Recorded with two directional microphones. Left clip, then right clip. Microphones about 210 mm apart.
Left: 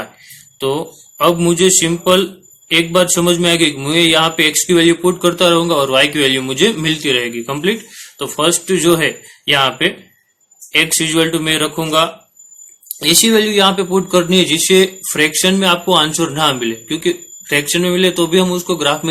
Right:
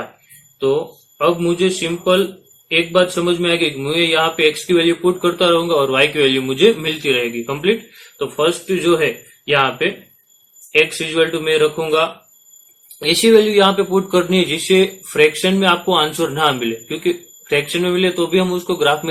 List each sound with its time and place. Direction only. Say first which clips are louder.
1.2 s a man's voice: left 4 dB; 35° left (ahead or behind)